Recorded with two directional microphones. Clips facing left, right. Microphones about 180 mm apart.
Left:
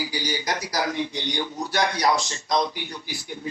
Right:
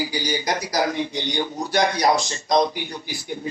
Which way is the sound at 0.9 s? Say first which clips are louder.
Right 2 dB; 45° right (ahead or behind).